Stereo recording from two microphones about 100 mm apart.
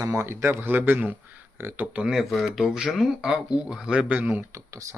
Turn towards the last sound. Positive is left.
turn(degrees=-15)  # may be behind; listen again after turning